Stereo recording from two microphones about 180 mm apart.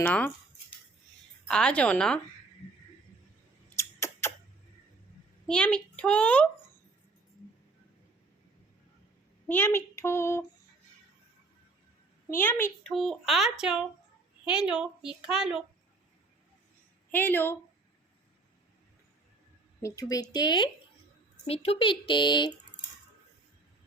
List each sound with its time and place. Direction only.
0.0 s a child's voice: 10° left (ahead or behind)
1.5 s a woman's voice: 5° left (ahead or behind)
4.0 s a sound: 15° left (ahead or behind)
5.5 s a child's voice: 5° left (ahead or behind)
9.5 s a child's voice: 10° left (ahead or behind)
12.3 s a child's voice: 10° left (ahead or behind)
12.9 s a woman's voice: centre (ahead or behind)
17.1 s a child's voice: 10° left (ahead or behind)
19.8 s speech: 20° left (ahead or behind)